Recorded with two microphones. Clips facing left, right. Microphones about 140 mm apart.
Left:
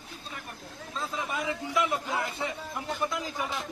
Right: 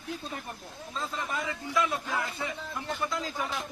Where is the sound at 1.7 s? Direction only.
20° left (ahead or behind).